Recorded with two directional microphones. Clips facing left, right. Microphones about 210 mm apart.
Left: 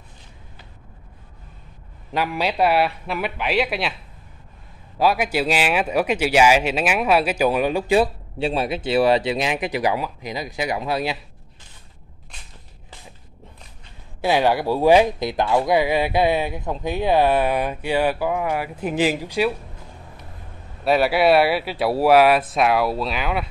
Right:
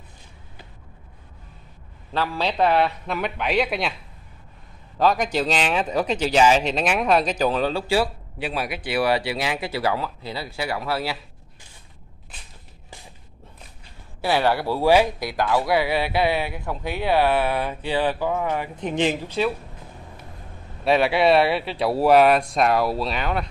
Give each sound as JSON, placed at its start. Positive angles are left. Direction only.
{"t": 2.1, "sound": "speech", "side_deg": 15}
{"t": 4.9, "sound": "speech", "side_deg": 10}
{"t": 14.2, "sound": "speech", "side_deg": 15}
{"t": 20.8, "sound": "speech", "side_deg": 5}